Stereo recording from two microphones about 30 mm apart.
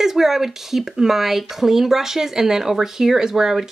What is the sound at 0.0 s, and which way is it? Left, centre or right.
Speech, centre.